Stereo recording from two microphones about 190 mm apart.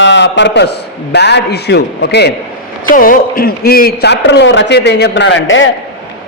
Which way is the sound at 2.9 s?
45° left (ahead or behind).